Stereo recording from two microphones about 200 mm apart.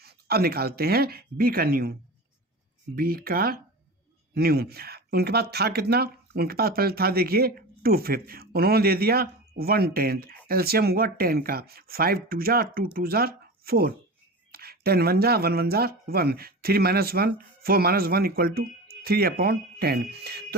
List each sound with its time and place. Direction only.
0.0 s speech: 50° right (ahead or behind)